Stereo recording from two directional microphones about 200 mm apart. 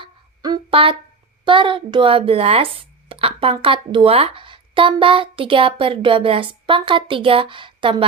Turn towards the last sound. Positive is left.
turn(degrees=-25)  # may be behind; listen again after turning